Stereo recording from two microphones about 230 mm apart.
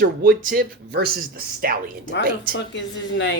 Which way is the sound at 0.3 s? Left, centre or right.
Right.